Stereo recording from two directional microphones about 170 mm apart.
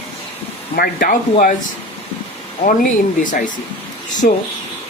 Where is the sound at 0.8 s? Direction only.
55° left (ahead or behind).